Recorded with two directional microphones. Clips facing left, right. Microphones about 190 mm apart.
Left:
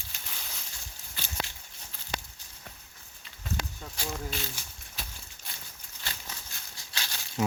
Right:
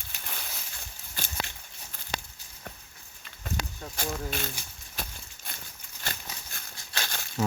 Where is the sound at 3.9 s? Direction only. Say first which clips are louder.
Right 3 dB; 55° right (ahead or behind).